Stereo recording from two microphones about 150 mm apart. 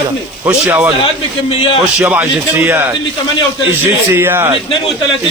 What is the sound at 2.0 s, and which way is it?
Speech, 5° right (ahead or behind).